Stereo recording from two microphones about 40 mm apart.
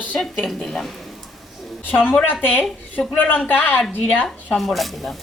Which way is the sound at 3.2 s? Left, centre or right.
Left.